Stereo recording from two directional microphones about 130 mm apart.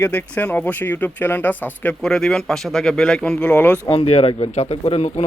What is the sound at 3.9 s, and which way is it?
Speech, 50° left (ahead or behind).